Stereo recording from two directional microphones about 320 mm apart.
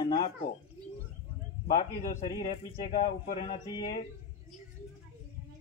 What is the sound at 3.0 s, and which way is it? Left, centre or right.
Speech, left.